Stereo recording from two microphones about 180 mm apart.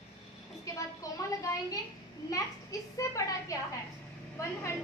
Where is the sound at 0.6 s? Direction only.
20° left (ahead or behind).